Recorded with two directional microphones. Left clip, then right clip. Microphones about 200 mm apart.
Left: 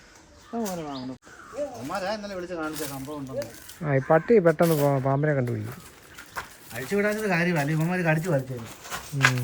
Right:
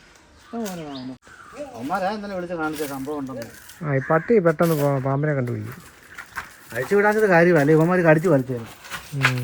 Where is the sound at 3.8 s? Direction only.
15° left (ahead or behind); by 5.0 s centre (ahead or behind).